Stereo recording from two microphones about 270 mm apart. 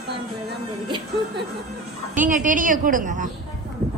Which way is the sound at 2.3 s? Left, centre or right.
Right.